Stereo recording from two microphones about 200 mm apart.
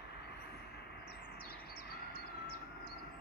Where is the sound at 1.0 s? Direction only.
50° left (ahead or behind).